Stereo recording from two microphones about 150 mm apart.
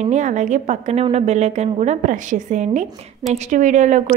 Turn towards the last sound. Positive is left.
turn(degrees=-55)  # may be behind; listen again after turning